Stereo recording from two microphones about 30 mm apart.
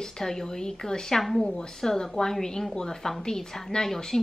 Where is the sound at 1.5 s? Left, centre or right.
Centre.